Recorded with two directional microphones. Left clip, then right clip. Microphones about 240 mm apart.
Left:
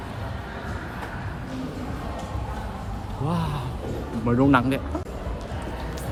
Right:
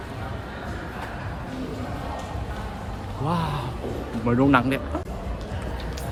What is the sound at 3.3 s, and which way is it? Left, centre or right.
Speech, centre.